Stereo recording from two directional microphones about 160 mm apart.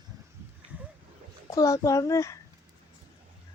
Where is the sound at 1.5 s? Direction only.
20° left (ahead or behind).